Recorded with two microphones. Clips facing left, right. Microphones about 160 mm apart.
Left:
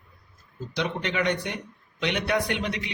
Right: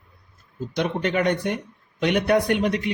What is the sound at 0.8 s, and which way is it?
A man's voice, 45° right (ahead or behind).